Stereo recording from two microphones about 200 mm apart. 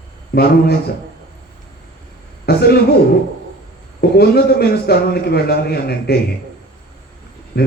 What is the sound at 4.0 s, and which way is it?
A man's voice, 50° left (ahead or behind).